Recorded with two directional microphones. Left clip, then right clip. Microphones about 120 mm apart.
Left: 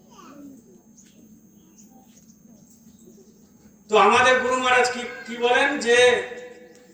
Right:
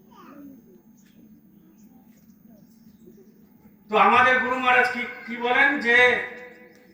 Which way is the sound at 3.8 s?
20° left (ahead or behind).